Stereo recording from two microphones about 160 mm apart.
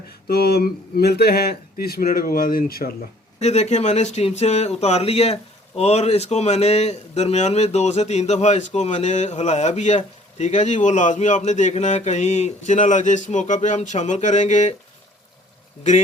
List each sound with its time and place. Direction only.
0.3 s speech: 80° left
3.4 s speech: 45° left (ahead or behind)